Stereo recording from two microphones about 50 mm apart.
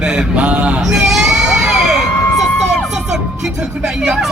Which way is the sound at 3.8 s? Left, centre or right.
Centre.